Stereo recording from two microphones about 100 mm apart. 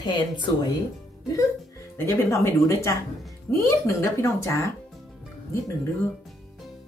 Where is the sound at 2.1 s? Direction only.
30° left (ahead or behind).